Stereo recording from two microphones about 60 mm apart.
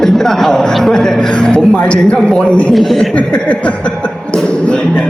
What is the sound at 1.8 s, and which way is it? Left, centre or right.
Speech, centre.